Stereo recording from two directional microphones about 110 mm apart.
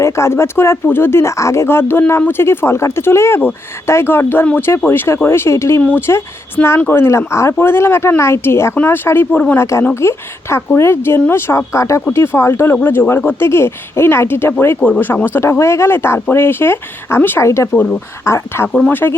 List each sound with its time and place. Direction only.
0.0 s speech: 25° left (ahead or behind)
9.9 s speech: 25° left (ahead or behind)
17.7 s speech: 10° left (ahead or behind)
18.3 s speech: 25° left (ahead or behind)